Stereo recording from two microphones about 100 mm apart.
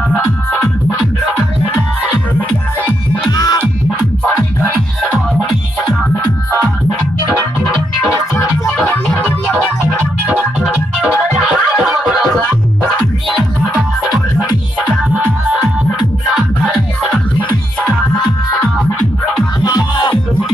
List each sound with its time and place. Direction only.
3.3 s music: 40° left (ahead or behind)
8.6 s music: 10° left (ahead or behind)
10.6 s music: 5° right (ahead or behind)
19.6 s music: 50° left (ahead or behind)